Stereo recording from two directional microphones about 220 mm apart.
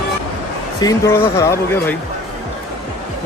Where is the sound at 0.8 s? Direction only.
15° left (ahead or behind).